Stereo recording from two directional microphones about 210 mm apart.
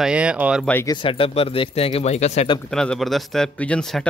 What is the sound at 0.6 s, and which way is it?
Speech, 10° left (ahead or behind).